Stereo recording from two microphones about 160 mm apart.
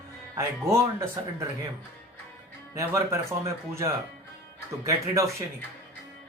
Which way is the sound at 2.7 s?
20° right (ahead or behind).